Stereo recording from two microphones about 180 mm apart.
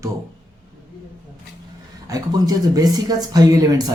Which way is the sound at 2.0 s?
20° right (ahead or behind).